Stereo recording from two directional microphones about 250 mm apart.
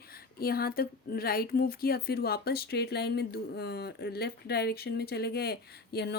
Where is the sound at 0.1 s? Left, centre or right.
Left.